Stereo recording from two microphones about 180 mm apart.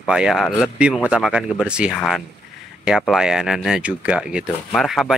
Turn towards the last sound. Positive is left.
turn(degrees=0)  # may be behind; listen again after turning